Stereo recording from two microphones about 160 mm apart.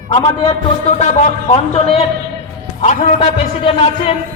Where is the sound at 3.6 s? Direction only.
35° left (ahead or behind).